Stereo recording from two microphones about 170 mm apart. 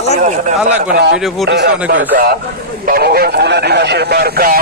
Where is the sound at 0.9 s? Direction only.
75° right (ahead or behind).